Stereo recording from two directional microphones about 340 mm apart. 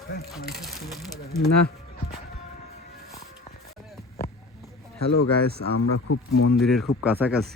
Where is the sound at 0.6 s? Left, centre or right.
Centre.